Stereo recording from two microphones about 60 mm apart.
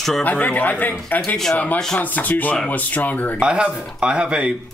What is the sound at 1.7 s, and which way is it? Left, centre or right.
Speech, centre.